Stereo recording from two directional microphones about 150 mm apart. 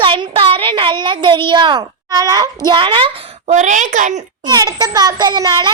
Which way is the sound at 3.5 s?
55° right (ahead or behind).